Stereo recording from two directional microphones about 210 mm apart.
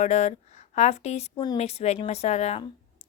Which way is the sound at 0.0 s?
35° left (ahead or behind).